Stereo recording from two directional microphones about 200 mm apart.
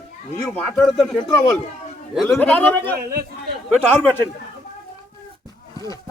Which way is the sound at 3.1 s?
50° right (ahead or behind).